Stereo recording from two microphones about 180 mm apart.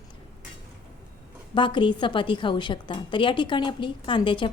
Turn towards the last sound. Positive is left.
turn(degrees=25)  # may be behind; listen again after turning